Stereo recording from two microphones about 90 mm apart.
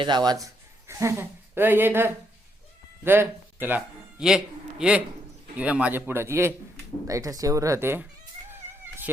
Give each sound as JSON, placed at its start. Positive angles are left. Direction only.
{"t": 0.0, "sound": "speech", "side_deg": -55}
{"t": 4.2, "sound": "a man's voice", "side_deg": -5}
{"t": 7.1, "sound": "speech", "side_deg": -40}